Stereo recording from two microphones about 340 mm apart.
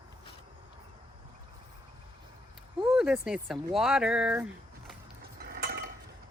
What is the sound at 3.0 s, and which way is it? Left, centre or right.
Speech, centre.